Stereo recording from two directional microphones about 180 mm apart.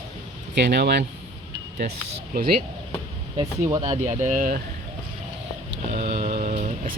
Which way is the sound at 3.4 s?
25° right (ahead or behind).